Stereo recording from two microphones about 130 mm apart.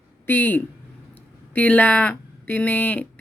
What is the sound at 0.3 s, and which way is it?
Speech, 15° left (ahead or behind).